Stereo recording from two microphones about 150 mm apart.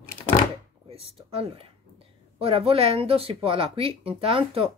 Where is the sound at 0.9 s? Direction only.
40° right (ahead or behind).